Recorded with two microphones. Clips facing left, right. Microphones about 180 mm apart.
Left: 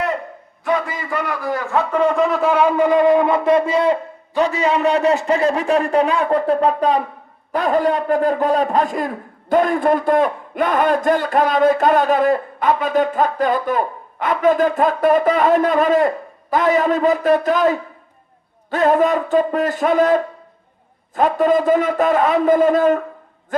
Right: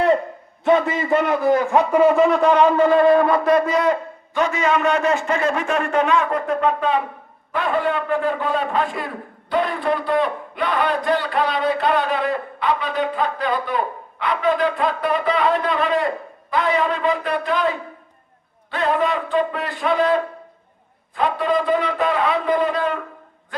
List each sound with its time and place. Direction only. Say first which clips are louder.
0.6 s a man's voice: right 4 dB; 25° right (ahead or behind); by 23.0 s 45° left (ahead or behind)